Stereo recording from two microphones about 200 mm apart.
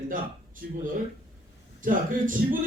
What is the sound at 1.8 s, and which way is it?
Speech, 40° right (ahead or behind).